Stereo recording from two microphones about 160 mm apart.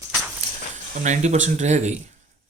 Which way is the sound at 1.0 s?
50° right (ahead or behind).